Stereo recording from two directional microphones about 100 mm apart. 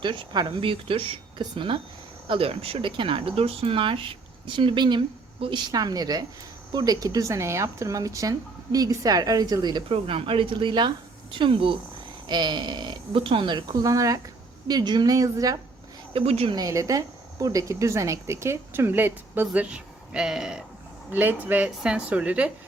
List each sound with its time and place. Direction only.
0.0 s a woman's voice: 55° right (ahead or behind)
9.9 s a woman's voice: 65° right (ahead or behind); by 15.5 s 35° right (ahead or behind)
16.1 s a woman's voice: 90° right
16.5 s a woman's voice: 40° right (ahead or behind); by 19.6 s 20° right (ahead or behind)
19.7 s speech: 10° right (ahead or behind)
21.1 s speech: 20° right (ahead or behind)